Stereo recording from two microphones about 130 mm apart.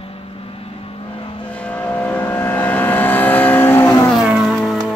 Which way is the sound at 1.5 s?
10° left (ahead or behind).